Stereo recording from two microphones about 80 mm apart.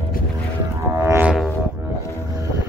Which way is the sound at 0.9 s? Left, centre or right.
Right.